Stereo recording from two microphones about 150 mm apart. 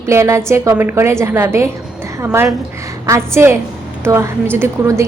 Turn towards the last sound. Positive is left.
turn(degrees=-15)  # may be behind; listen again after turning